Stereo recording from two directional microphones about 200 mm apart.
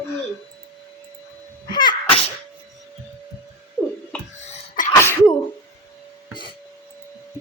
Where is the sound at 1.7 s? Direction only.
25° left (ahead or behind).